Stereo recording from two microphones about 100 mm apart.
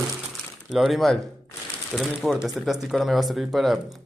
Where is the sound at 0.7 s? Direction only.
Centre (ahead or behind).